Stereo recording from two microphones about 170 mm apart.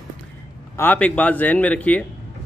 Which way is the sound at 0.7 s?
10° left (ahead or behind).